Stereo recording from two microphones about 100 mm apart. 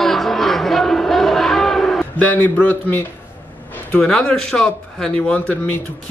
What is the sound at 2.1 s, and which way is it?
Speech, 15° left (ahead or behind).